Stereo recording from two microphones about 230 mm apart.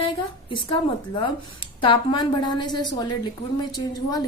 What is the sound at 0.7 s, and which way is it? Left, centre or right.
A woman's voice, left.